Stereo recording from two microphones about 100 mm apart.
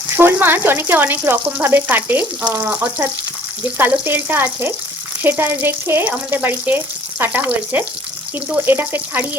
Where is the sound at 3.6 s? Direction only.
20° right (ahead or behind).